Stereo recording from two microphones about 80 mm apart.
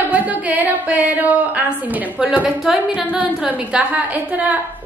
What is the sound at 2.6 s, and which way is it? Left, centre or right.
Speech, centre.